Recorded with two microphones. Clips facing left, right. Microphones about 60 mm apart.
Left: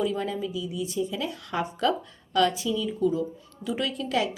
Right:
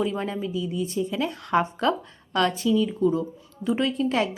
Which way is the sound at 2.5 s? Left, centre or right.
Right.